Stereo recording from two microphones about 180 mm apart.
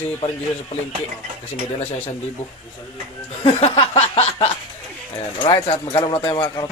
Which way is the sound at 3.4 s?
30° left (ahead or behind).